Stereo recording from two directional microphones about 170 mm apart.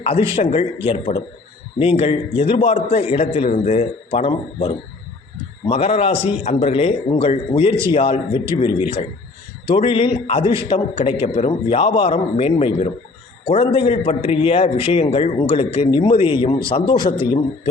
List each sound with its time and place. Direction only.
0.0 s a man's voice: 35° left (ahead or behind)